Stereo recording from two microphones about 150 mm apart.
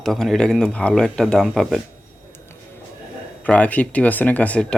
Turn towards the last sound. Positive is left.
turn(degrees=10)  # may be behind; listen again after turning